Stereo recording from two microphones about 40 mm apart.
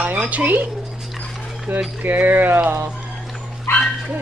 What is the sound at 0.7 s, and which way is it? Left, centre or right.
Dog, centre.